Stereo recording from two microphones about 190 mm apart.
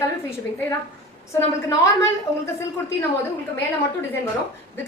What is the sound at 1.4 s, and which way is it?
Speech, 15° left (ahead or behind).